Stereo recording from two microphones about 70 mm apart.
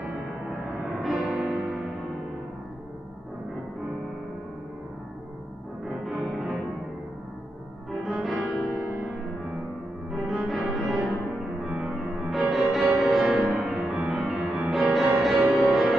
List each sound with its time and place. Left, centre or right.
1.0 s music: centre
6.0 s music: centre
8.0 s music: centre
10.1 s music: centre
11.6 s music: centre